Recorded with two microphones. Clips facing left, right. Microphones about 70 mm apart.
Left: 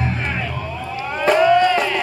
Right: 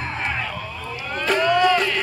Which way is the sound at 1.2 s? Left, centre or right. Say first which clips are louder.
Left 4 dB; centre.